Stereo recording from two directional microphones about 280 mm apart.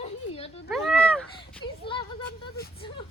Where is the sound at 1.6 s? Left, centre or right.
Centre.